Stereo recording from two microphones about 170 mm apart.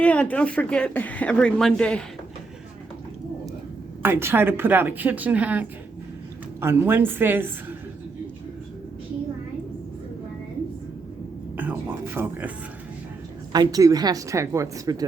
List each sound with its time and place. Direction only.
0.0 s speech: 5° left (ahead or behind)
4.0 s a woman's voice: 15° right (ahead or behind)
11.5 s a sound: 10° right (ahead or behind)
13.5 s a woman's voice: 20° right (ahead or behind)